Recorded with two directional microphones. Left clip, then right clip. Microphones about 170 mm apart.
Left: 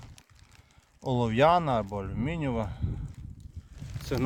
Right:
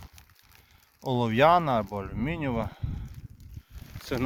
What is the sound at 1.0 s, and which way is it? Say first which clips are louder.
Speech: right 2 dB; 5° left (ahead or behind).